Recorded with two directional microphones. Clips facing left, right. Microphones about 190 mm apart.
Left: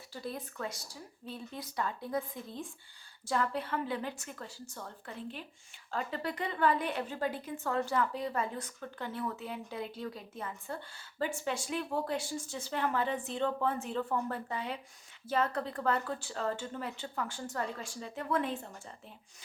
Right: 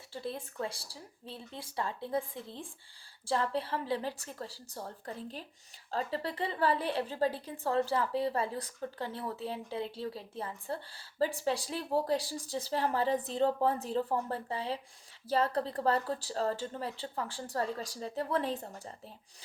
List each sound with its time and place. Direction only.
0.1 s a woman's voice: 25° right (ahead or behind)